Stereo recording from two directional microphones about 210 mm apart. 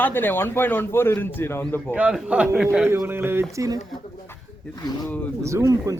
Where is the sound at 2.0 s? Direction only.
5° right (ahead or behind).